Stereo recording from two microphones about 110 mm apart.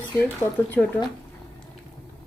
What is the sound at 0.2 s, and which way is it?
Speech, 15° left (ahead or behind).